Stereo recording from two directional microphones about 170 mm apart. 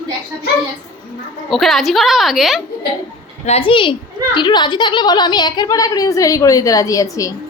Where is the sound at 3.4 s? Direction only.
35° left (ahead or behind).